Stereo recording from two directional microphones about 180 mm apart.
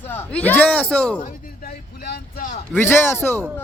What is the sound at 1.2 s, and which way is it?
Music, 55° left (ahead or behind).